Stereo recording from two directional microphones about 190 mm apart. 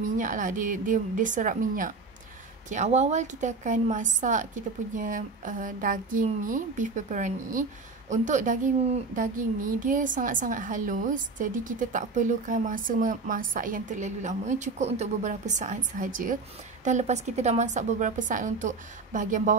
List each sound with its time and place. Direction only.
0.0 s a child's voice: 45° right (ahead or behind)